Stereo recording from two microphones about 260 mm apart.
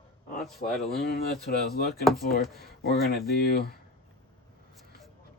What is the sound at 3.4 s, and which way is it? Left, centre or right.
Speech, left.